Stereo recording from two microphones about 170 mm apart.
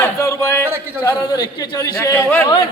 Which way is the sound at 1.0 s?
25° left (ahead or behind).